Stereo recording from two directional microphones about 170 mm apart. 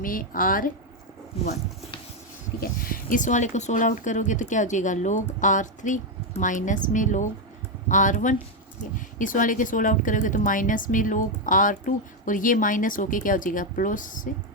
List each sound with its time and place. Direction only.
0.0 s a woman's voice: 55° left (ahead or behind)
2.6 s speech: 55° left (ahead or behind)